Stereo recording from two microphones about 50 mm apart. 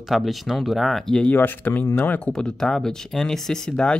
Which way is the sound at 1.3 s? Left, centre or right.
Left.